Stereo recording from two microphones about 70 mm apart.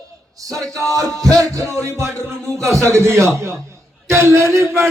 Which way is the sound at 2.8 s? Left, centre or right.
Right.